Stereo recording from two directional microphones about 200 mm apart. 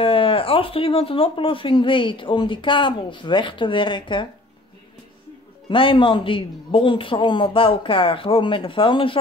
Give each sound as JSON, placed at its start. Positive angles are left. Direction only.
{"t": 0.0, "sound": "speech", "side_deg": 25}
{"t": 5.7, "sound": "speech", "side_deg": 25}